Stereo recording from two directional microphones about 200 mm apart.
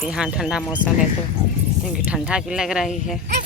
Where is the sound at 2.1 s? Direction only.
5° right (ahead or behind).